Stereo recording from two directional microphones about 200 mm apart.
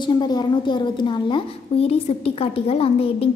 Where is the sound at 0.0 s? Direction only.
20° left (ahead or behind).